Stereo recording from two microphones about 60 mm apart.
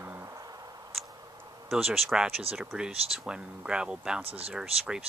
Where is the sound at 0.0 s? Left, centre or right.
Right.